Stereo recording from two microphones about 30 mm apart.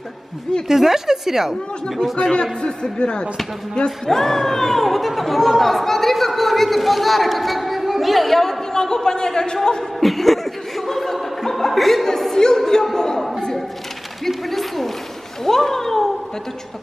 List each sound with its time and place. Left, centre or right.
0.7 s speech: centre
2.6 s speech: left
4.1 s speech: centre
8.7 s speech: left
9.9 s speech: centre
10.9 s chuckle: centre
11.1 s a sound: centre
12.1 s opera: centre
12.4 s singing: centre
12.9 s a sound: left
14.2 s speech: centre